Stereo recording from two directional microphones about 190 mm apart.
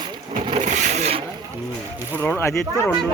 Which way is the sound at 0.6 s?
40° right (ahead or behind).